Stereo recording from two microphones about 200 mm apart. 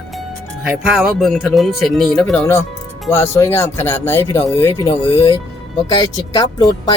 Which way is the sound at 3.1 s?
15° left (ahead or behind).